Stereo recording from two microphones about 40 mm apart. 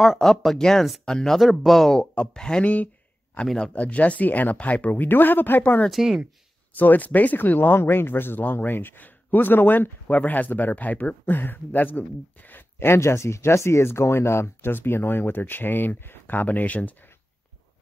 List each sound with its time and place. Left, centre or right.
0.0 s speech: centre
1.4 s speech: centre
2.0 s speech: centre
2.6 s speech: left
5.0 s a man's voice: left
5.9 s speech: centre
6.8 s a man's voice: left
7.3 s a man's voice: left
12.7 s speech: left
14.7 s a man's voice: left